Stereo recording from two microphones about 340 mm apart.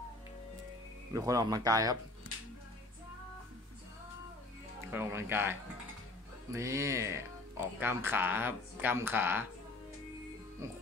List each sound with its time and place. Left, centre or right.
1.1 s speech: centre
4.9 s speech: centre
10.6 s speech: centre